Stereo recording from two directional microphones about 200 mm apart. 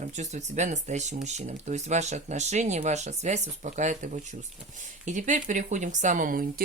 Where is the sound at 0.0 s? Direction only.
35° right (ahead or behind).